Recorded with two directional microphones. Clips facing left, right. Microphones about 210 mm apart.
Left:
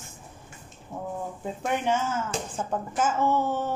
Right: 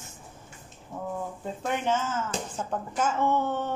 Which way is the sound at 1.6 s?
10° left (ahead or behind).